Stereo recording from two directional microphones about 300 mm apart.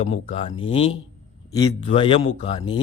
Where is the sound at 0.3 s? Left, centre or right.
Centre.